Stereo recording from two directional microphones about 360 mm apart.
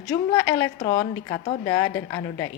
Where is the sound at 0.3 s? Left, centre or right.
Centre.